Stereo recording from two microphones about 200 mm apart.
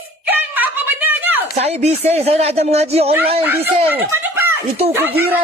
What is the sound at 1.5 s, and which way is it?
Speech, 30° right (ahead or behind).